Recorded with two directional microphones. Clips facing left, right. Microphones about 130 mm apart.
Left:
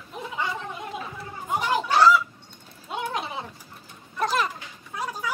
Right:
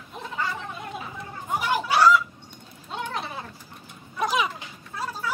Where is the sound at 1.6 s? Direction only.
5° right (ahead or behind).